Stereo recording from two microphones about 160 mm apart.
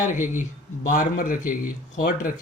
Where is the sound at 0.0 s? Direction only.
55° left (ahead or behind).